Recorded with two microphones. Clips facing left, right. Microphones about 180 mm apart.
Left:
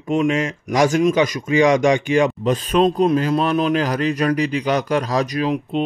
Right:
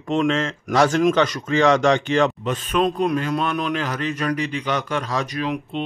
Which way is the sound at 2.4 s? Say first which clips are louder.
Left 4 dB; 35° left (ahead or behind).